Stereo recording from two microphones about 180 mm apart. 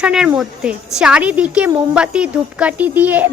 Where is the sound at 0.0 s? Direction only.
5° right (ahead or behind).